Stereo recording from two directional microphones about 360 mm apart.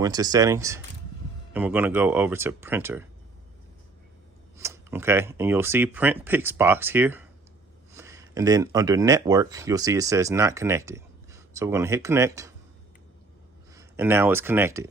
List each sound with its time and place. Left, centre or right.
0.0 s speech: centre
4.5 s speech: centre
13.7 s speech: centre